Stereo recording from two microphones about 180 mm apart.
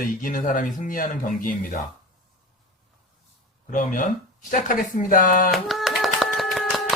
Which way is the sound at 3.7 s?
45° left (ahead or behind).